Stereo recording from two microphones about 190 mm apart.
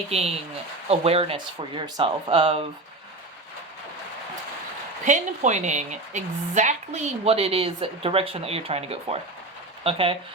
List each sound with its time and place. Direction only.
0.1 s speech: 35° right (ahead or behind)
5.0 s speech: 40° right (ahead or behind)